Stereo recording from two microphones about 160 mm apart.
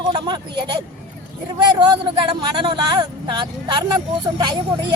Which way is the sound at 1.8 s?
30° right (ahead or behind).